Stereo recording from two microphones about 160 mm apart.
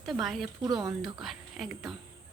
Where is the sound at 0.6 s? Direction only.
25° right (ahead or behind).